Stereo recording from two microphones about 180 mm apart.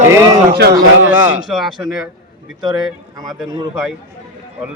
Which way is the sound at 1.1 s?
10° right (ahead or behind).